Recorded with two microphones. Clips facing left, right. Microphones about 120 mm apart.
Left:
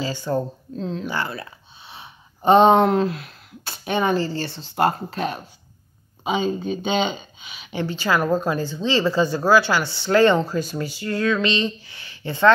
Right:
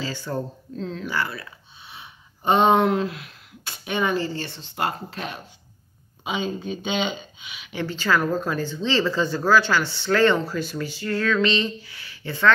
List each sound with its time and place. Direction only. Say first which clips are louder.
0.0 s a sound: left 4 dB; 15° left (ahead or behind)
0.3 s speech: left 5 dB; 20° left (ahead or behind); by 7.7 s 35° left (ahead or behind)
7.7 s speech: left 1 dB; 15° left (ahead or behind)